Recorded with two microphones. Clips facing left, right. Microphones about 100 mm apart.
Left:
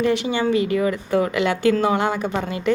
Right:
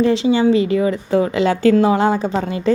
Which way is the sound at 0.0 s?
30° right (ahead or behind).